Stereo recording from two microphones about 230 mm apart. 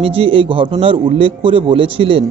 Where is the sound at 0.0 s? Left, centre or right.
Right.